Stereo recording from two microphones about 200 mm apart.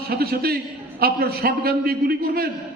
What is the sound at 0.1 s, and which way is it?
A man's voice, 50° right (ahead or behind).